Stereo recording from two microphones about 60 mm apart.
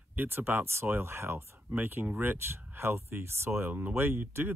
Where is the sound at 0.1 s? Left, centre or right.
Right.